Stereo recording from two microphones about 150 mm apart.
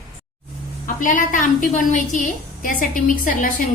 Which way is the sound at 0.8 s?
65° left (ahead or behind).